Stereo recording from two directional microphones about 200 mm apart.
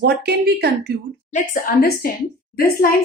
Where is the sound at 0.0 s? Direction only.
55° right (ahead or behind).